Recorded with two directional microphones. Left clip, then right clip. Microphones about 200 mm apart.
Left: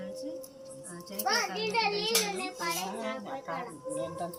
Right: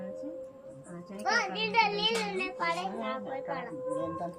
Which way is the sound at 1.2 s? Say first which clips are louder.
Right 1 dB; 20° left (ahead or behind).